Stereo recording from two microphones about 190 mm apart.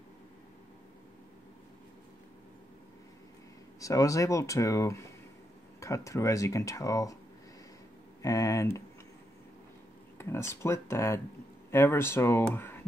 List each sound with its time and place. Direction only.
3.8 s speech: 15° left (ahead or behind)
8.2 s speech: 15° left (ahead or behind)
10.1 s speech: 15° left (ahead or behind)